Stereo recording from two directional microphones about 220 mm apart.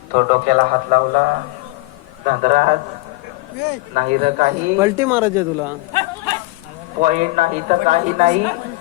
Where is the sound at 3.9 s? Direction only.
35° right (ahead or behind).